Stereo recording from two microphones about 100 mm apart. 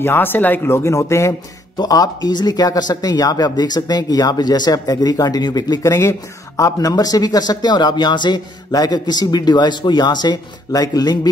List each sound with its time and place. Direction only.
0.0 s speech: 20° left (ahead or behind)
1.8 s speech: 40° left (ahead or behind)
5.9 s speech: 30° left (ahead or behind)